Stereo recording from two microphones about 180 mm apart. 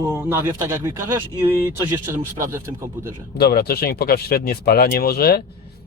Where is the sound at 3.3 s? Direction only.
60° left (ahead or behind).